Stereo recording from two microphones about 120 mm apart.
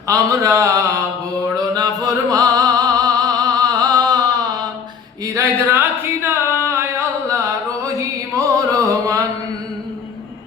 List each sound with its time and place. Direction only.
0.1 s speech: 25° right (ahead or behind)
1.7 s music: 30° right (ahead or behind)
5.2 s a sound: 25° right (ahead or behind)
7.3 s music: 25° right (ahead or behind)